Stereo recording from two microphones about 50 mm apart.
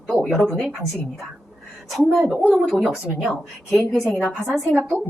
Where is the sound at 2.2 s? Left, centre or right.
Centre.